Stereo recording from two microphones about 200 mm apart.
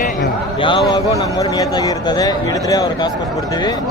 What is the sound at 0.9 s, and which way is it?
A man's voice, 20° left (ahead or behind).